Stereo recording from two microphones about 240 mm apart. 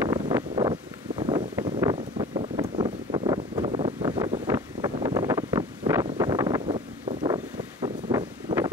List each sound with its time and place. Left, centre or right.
0.0 s wind: centre
4.5 s wind noise: centre
7.8 s wind: centre